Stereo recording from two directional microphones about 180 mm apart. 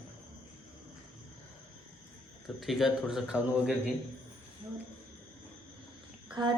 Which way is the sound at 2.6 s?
Centre (ahead or behind).